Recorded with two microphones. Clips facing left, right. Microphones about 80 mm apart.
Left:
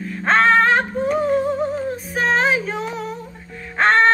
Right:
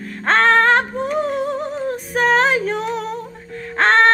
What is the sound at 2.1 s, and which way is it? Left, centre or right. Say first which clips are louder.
Music: right 3 dB; right.